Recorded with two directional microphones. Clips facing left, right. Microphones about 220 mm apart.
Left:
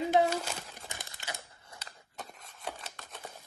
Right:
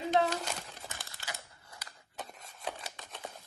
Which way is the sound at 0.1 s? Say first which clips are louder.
Left 1 dB; 5° left (ahead or behind).